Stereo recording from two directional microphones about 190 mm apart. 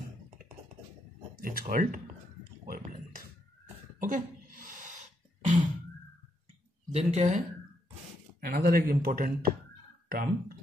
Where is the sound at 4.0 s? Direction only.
45° right (ahead or behind).